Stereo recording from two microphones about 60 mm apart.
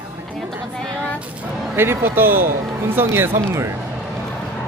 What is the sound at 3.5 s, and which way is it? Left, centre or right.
Speech, right.